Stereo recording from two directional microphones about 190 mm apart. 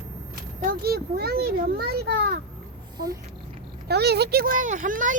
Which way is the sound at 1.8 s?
55° right (ahead or behind).